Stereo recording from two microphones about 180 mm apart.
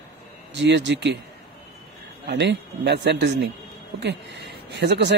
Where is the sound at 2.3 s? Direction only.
70° right (ahead or behind).